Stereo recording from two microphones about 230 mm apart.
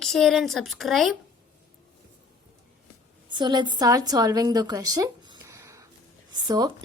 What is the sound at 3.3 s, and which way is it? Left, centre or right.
A woman's voice, centre.